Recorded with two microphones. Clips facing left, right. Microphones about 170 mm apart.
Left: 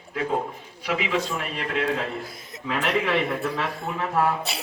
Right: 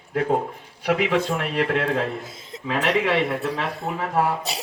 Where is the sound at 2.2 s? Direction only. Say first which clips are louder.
Even; 25° right (ahead or behind).